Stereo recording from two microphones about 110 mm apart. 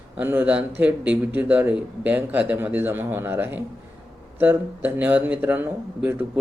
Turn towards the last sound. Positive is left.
turn(degrees=-15)  # may be behind; listen again after turning